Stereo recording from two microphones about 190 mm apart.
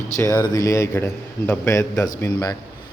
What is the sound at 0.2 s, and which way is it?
A man's voice, 20° left (ahead or behind).